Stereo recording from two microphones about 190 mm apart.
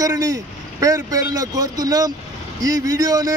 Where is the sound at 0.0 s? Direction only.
20° right (ahead or behind).